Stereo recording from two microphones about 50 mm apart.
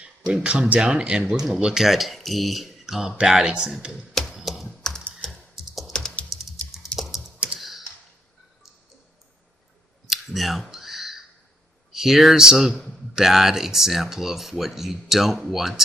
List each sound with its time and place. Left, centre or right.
0.3 s speech: centre
1.2 s speech: centre
4.1 s typewriter: centre
4.8 s typing: centre
6.2 s typing: centre
7.3 s typing: right
7.6 s computer keyboard: centre
10.1 s a sound: centre
11.9 s speech: centre